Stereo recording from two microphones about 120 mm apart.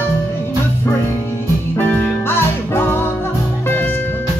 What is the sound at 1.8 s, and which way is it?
Music, 15° left (ahead or behind).